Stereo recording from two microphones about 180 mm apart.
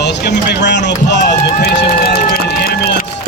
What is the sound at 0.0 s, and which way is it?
Speech, 70° left (ahead or behind).